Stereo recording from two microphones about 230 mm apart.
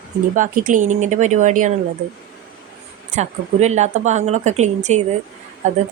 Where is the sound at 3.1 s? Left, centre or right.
Right.